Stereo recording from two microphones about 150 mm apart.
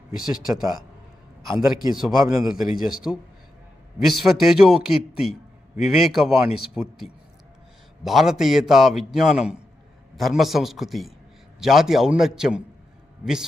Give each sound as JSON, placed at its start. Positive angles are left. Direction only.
{"t": 0.2, "sound": "a man's voice", "side_deg": -5}
{"t": 2.1, "sound": "a man's voice", "side_deg": -20}
{"t": 2.5, "sound": "a man's voice", "side_deg": -5}